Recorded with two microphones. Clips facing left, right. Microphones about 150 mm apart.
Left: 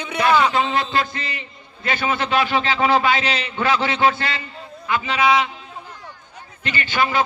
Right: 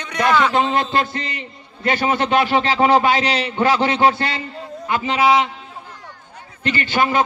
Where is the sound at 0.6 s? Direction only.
45° right (ahead or behind); by 5.3 s 30° right (ahead or behind).